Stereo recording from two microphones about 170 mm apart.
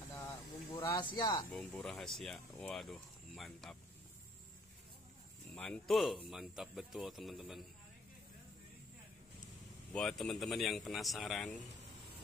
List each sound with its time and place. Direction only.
0.7 s speech: 25° left (ahead or behind)
1.5 s speech: 5° left (ahead or behind)
5.5 s speech: 5° left (ahead or behind)
9.9 s speech: 5° left (ahead or behind)